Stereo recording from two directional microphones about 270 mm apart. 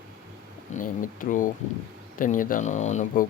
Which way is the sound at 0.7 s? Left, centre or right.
Left.